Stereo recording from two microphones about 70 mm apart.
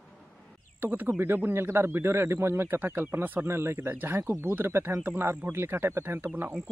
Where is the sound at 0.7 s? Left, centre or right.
Right.